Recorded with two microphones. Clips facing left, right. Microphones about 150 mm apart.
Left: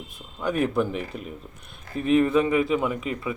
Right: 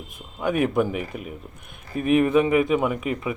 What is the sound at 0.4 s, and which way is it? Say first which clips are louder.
Speech: right 2 dB; 10° right (ahead or behind).